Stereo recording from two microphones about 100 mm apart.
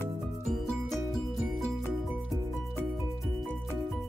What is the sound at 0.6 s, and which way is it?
Music, centre (ahead or behind).